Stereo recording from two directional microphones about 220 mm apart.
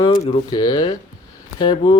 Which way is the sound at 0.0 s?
20° left (ahead or behind).